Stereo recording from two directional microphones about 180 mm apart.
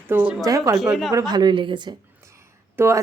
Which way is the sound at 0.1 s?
10° right (ahead or behind).